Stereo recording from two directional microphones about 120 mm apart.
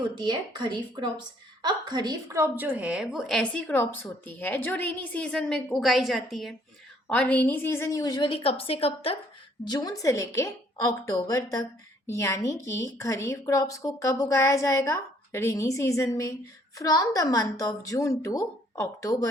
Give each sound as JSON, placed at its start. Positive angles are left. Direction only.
{"t": 0.2, "sound": "a woman's voice", "side_deg": -40}
{"t": 3.5, "sound": "a woman's voice", "side_deg": 15}
{"t": 7.1, "sound": "a woman's voice", "side_deg": 10}
{"t": 8.3, "sound": "a woman's voice", "side_deg": 50}
{"t": 9.6, "sound": "a woman's voice", "side_deg": 35}